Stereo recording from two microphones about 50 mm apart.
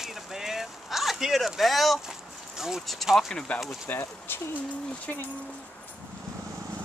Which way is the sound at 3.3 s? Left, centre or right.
Centre.